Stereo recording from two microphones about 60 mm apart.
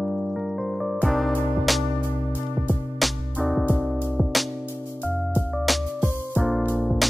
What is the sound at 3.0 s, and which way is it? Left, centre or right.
Music, centre.